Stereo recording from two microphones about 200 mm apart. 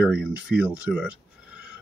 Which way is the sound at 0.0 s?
5° right (ahead or behind).